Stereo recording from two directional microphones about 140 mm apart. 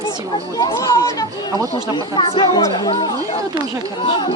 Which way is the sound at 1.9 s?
35° left (ahead or behind).